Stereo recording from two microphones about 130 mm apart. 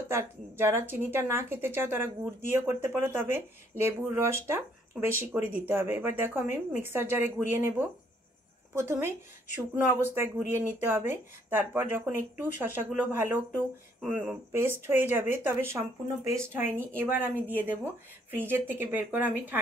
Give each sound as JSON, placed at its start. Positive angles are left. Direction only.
{"t": 0.1, "sound": "speech", "side_deg": -20}